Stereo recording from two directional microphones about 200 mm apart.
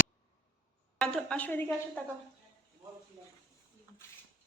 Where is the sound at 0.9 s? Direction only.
5° left (ahead or behind).